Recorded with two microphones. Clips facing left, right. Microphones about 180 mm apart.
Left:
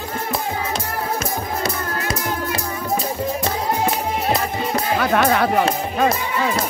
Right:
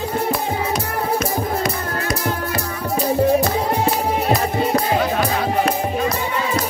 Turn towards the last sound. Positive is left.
turn(degrees=65)  # may be behind; listen again after turning